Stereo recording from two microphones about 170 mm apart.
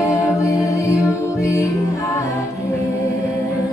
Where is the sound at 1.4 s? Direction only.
20° left (ahead or behind).